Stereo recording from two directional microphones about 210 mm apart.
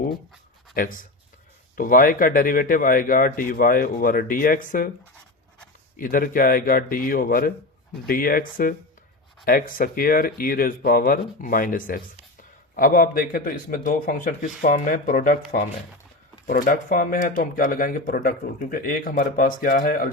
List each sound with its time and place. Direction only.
0.7 s speech: 40° left (ahead or behind)
6.0 s speech: 40° left (ahead or behind)